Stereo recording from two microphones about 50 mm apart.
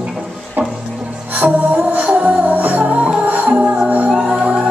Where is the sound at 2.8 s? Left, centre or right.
Centre.